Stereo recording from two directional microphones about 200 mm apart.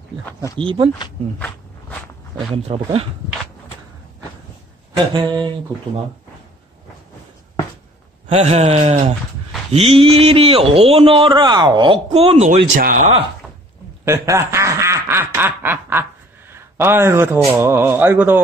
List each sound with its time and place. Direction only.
0.6 s a man's voice: 25° right (ahead or behind)
2.5 s a man's voice: 30° right (ahead or behind)
4.9 s a man's voice: 20° right (ahead or behind)
8.3 s a sound: 30° right (ahead or behind)
9.7 s a man's voice: 30° right (ahead or behind)
14.0 s quack: 15° right (ahead or behind)
16.5 s speech: 10° right (ahead or behind)